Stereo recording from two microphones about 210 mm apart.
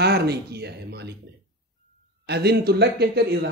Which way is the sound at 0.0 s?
50° right (ahead or behind).